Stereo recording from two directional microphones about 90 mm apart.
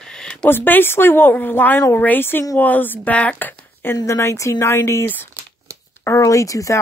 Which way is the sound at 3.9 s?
30° left (ahead or behind).